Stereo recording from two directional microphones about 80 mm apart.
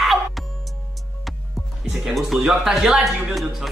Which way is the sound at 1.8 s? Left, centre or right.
Centre.